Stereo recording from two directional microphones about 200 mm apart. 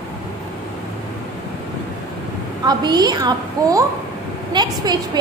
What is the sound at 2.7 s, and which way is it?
A woman's voice, 20° right (ahead or behind).